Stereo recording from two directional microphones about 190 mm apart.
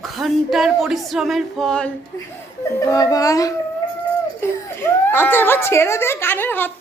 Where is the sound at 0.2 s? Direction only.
Centre (ahead or behind).